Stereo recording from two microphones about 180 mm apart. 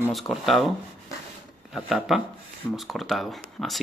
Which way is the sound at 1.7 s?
Centre (ahead or behind).